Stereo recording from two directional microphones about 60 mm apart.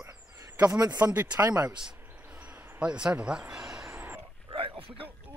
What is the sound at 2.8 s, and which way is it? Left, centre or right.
Speech, centre.